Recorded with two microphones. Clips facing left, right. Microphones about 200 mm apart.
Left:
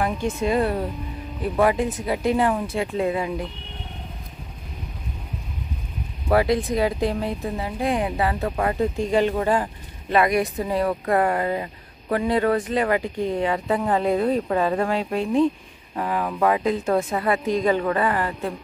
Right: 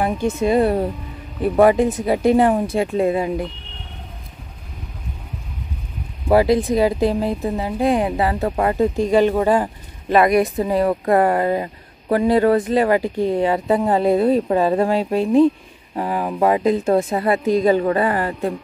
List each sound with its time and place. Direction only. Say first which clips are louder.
0.0 s a woman's voice: right 4 dB; 25° right (ahead or behind)
6.3 s a woman's voice: right 5 dB; 30° right (ahead or behind)